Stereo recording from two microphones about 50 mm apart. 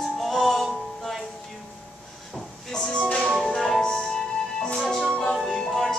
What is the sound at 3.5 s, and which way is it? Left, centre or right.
Music, centre.